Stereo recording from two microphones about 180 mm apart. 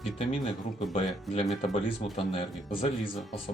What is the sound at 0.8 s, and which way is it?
Speech, 35° left (ahead or behind).